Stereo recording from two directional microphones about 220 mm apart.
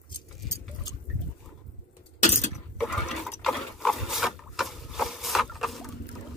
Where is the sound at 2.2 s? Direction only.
30° left (ahead or behind).